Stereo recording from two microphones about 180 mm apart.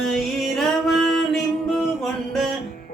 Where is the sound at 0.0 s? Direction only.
Centre (ahead or behind).